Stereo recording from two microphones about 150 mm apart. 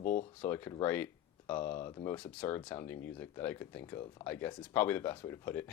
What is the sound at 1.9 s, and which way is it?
Speech, 25° left (ahead or behind).